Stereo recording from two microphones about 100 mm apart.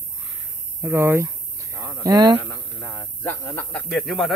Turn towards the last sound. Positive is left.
turn(degrees=0)  # may be behind; listen again after turning